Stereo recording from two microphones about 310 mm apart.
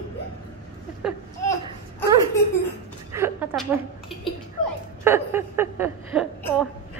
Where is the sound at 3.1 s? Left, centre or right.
Centre.